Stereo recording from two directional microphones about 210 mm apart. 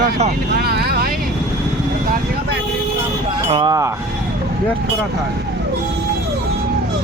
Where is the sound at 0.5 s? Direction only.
50° right (ahead or behind).